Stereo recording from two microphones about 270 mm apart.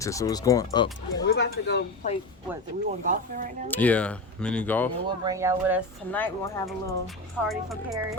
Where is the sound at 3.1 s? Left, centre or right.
Right.